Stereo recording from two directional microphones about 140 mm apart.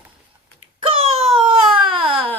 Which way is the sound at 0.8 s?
45° right (ahead or behind).